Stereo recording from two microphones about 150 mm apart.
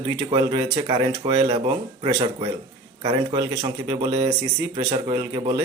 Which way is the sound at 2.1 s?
45° right (ahead or behind).